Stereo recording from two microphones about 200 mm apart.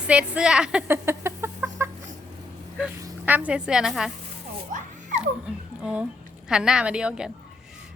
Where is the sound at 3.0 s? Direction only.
10° right (ahead or behind).